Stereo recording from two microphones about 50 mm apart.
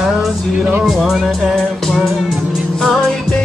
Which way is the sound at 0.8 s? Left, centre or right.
Centre.